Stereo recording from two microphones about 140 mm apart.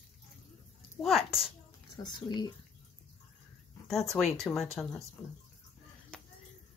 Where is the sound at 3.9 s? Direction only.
Centre (ahead or behind).